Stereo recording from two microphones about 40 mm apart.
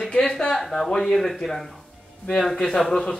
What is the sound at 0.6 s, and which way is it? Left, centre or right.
Speech, centre.